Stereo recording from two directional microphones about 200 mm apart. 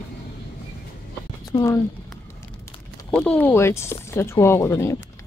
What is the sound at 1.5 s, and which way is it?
Speech, 15° left (ahead or behind).